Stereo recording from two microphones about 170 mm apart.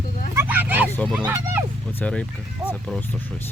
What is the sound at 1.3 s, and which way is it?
Speech, 15° right (ahead or behind).